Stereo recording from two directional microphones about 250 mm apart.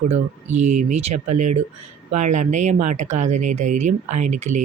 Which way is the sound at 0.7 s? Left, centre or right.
Right.